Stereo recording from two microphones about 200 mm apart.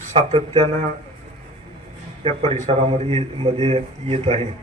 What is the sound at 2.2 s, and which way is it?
A man's voice, 30° right (ahead or behind).